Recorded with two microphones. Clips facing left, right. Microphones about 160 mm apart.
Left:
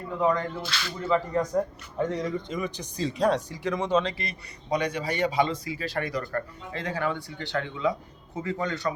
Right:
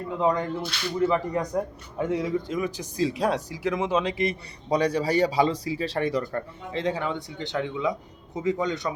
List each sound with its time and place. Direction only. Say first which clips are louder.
0.2 s a man's voice: right 1 dB; 15° right (ahead or behind)
0.6 s speech: right 3 dB; 90° left
1.0 s a man's voice: even; 15° right (ahead or behind)
4.7 s a man's voice: right 5 dB; 35° right (ahead or behind); by 8.9 s 15° right (ahead or behind)